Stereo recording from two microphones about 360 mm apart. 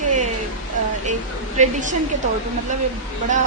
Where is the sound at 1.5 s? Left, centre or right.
Right.